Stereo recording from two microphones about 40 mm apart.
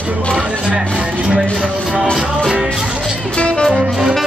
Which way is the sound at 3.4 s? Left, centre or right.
Left.